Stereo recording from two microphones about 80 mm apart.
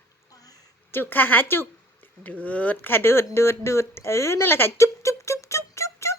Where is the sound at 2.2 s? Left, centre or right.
Centre.